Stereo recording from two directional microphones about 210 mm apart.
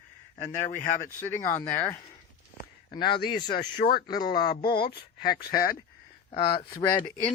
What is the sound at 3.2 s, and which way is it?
Speech, 20° left (ahead or behind).